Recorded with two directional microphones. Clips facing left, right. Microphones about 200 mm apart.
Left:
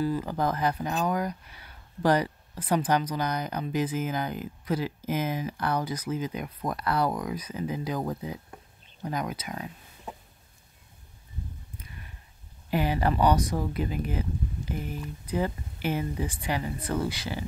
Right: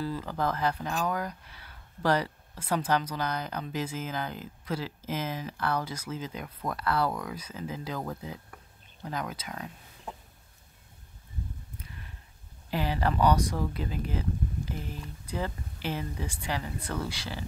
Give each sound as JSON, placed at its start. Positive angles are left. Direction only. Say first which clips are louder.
{"t": 0.0, "sound": "speech", "louder": "left 4 dB", "side_deg": 15}
{"t": 12.7, "sound": "speech", "louder": "left 3 dB", "side_deg": 15}